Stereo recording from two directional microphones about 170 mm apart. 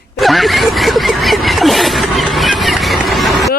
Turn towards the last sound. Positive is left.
turn(degrees=0)  # may be behind; listen again after turning